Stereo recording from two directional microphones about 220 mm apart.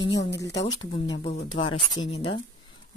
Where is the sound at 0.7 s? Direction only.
20° left (ahead or behind).